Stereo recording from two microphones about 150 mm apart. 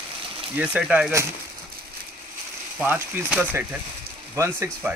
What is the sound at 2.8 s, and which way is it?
Speech, 10° right (ahead or behind).